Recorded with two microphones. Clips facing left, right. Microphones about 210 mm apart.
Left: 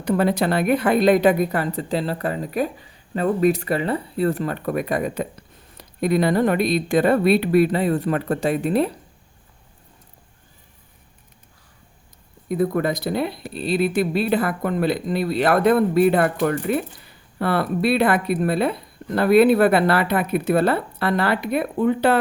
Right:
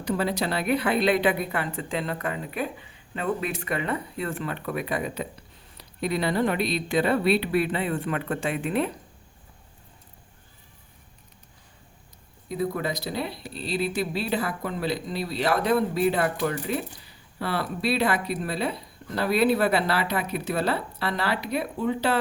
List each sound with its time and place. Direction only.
0.0 s a woman's voice: 55° left (ahead or behind); by 9.0 s 35° left (ahead or behind)
12.5 s speech: 55° left (ahead or behind)